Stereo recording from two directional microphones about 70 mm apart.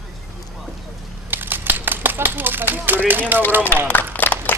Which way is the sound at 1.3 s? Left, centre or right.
Right.